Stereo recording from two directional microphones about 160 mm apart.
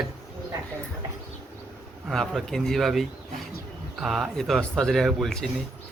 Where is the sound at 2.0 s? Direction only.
Centre (ahead or behind).